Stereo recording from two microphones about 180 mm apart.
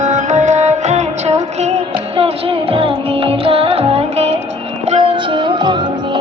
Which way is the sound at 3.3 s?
30° right (ahead or behind).